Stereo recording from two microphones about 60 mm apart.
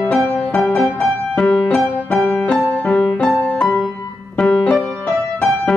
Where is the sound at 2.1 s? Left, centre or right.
Centre.